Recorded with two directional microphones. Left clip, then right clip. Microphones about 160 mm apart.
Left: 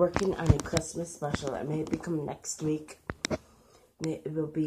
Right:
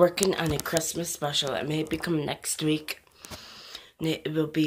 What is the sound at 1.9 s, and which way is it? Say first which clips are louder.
Speech: right 5 dB; 25° right (ahead or behind).